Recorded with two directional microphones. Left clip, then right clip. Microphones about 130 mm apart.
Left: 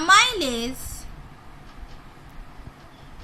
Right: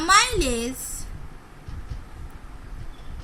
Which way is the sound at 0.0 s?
50° left (ahead or behind).